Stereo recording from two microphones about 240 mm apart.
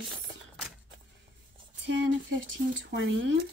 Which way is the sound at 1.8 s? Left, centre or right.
Right.